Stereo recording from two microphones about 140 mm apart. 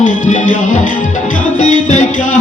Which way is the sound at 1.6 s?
60° left (ahead or behind).